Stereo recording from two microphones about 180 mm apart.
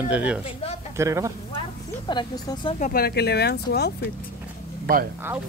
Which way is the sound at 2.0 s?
25° left (ahead or behind).